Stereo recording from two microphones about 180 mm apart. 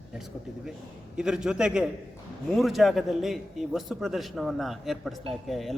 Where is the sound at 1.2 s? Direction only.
5° right (ahead or behind).